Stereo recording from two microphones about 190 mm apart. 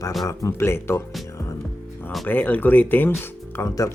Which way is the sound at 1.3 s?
15° left (ahead or behind).